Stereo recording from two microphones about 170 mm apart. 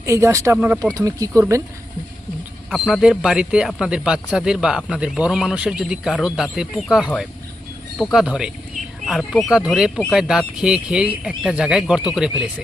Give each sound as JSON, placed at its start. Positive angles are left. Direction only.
{"t": 0.0, "sound": "speech", "side_deg": -15}
{"t": 2.6, "sound": "speech", "side_deg": 0}